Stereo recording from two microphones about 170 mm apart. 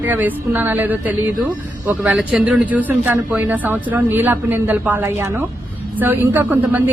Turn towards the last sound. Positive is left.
turn(degrees=-15)  # may be behind; listen again after turning